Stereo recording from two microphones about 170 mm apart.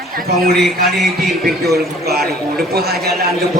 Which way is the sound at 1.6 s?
70° right (ahead or behind).